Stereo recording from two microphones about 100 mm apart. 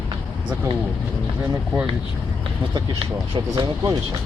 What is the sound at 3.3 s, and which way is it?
Speech, 45° right (ahead or behind).